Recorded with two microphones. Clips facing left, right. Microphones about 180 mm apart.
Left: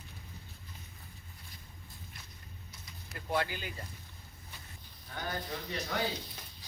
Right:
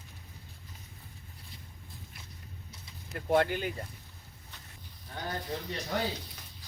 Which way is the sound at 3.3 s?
55° right (ahead or behind).